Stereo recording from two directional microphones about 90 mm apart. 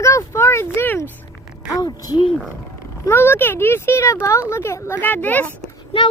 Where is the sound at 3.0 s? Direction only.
25° left (ahead or behind).